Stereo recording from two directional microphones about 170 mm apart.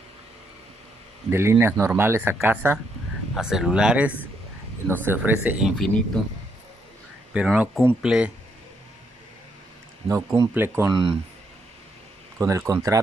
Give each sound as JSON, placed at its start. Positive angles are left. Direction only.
{"t": 1.3, "sound": "speech", "side_deg": -15}
{"t": 7.3, "sound": "speech", "side_deg": -5}
{"t": 10.0, "sound": "speech", "side_deg": -20}
{"t": 10.9, "sound": "speech", "side_deg": -30}
{"t": 12.4, "sound": "speech", "side_deg": -20}